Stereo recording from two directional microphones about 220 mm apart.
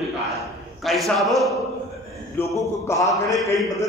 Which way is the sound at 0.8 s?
Centre (ahead or behind).